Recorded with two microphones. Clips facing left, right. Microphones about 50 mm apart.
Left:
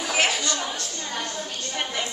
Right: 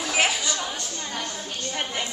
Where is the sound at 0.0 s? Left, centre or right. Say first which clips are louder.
Even; centre.